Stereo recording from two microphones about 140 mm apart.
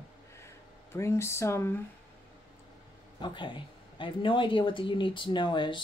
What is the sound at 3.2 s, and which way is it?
A woman's voice, 35° left (ahead or behind).